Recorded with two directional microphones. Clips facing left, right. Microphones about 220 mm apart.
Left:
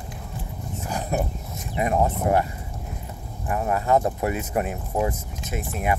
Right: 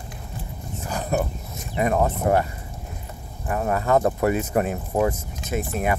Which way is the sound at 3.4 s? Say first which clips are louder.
Right 1 dB; 40° right (ahead or behind).